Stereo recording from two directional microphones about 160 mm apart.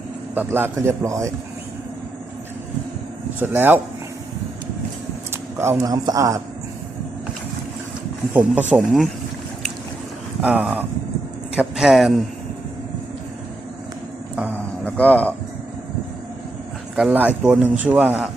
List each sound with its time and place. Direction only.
0.3 s speech: 15° right (ahead or behind)
3.4 s speech: 10° right (ahead or behind)
5.3 s a man's voice: 15° right (ahead or behind)
8.3 s a man's voice: 10° right (ahead or behind)
10.4 s a man's voice: 10° right (ahead or behind)
14.3 s a sound: 10° right (ahead or behind)
14.8 s speech: 10° left (ahead or behind)
16.9 s speech: 5° right (ahead or behind)